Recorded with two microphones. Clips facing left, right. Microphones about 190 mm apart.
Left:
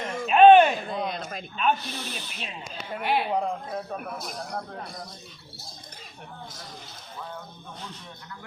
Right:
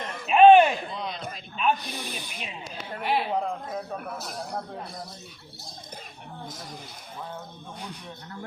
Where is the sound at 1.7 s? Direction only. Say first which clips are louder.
Even; 15° right (ahead or behind).